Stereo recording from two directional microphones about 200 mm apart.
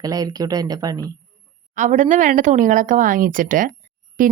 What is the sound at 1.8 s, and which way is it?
A woman's voice, 40° right (ahead or behind).